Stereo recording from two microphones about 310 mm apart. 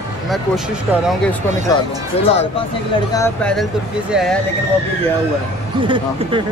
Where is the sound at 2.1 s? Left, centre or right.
Centre.